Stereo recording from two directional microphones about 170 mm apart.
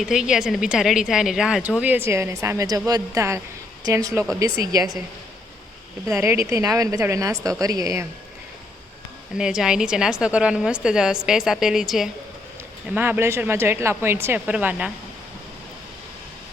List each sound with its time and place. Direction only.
0.0 s a woman's voice: 5° right (ahead or behind); by 4.9 s 20° right (ahead or behind)
6.1 s speech: 15° right (ahead or behind)
9.4 s a woman's voice: 5° right (ahead or behind)
12.9 s speech: 10° right (ahead or behind)